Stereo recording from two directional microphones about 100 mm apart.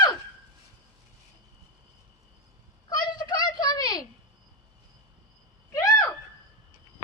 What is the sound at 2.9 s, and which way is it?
Children playing, 45° left (ahead or behind).